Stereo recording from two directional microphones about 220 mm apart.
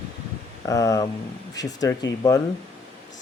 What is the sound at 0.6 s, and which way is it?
Speech, 15° left (ahead or behind).